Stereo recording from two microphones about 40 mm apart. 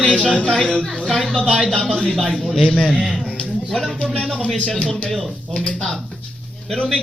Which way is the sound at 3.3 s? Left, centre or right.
Left.